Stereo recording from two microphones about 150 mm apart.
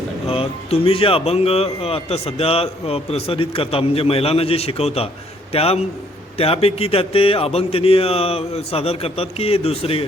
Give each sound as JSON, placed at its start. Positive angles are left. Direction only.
{"t": 0.3, "sound": "a man's voice", "side_deg": 40}